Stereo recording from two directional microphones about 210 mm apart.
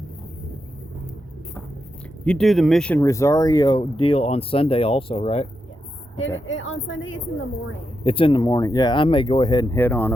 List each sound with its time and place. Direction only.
2.2 s speech: 5° left (ahead or behind); by 5.5 s 30° left (ahead or behind)
6.1 s a woman's voice: 65° left (ahead or behind)
8.0 s speech: 25° left (ahead or behind); by 10.2 s 10° left (ahead or behind)